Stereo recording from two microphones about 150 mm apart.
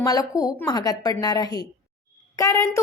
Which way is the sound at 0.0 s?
25° left (ahead or behind).